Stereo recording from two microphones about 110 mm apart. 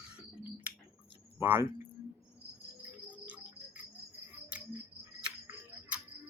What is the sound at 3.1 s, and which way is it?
Cricket, 15° right (ahead or behind).